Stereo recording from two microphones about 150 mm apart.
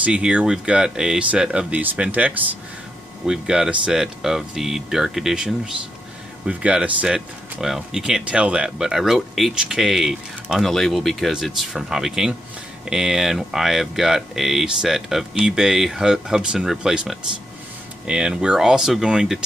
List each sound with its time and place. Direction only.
0.0 s speech: 5° right (ahead or behind)